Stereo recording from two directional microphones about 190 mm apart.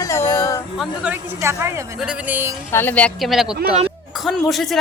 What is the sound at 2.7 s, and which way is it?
A woman's voice, 10° left (ahead or behind).